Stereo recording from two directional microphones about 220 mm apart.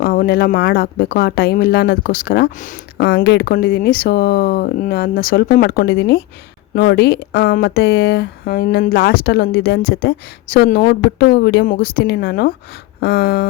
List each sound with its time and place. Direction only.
0.0 s speech: 45° left (ahead or behind)